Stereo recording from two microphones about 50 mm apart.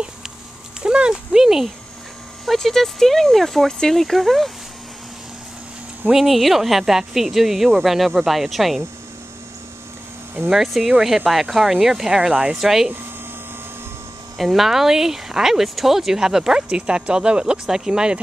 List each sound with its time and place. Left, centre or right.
0.8 s speech: centre
2.4 s speech: centre
6.1 s speech: centre
10.5 s speech: centre
12.5 s speech: centre
14.4 s speech: centre